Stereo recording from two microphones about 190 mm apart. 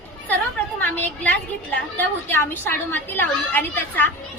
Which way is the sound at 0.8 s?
10° left (ahead or behind).